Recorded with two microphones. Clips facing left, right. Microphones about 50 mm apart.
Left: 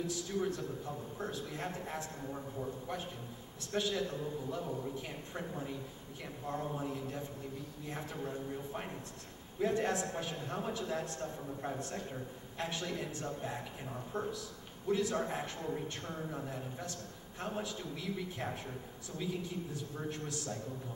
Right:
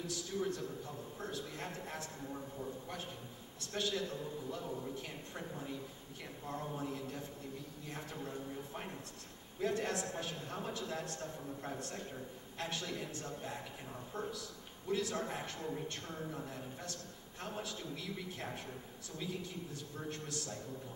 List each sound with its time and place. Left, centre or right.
0.0 s a man's voice: centre
20.0 s a man's voice: centre